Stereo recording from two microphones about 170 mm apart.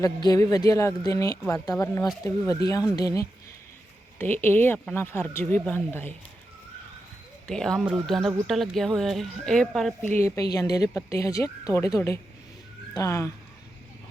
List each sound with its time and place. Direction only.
0.0 s speech: 20° left (ahead or behind)
7.4 s speech: 5° left (ahead or behind)
10.2 s speech: 15° left (ahead or behind)